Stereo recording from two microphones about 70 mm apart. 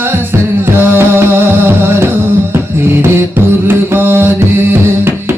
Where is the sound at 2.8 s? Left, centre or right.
Right.